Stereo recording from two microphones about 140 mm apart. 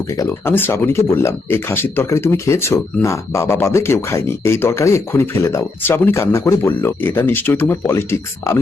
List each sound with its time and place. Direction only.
0.1 s speech: 15° left (ahead or behind)